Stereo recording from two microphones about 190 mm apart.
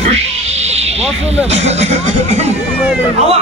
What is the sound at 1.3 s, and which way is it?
A man's voice, 35° right (ahead or behind).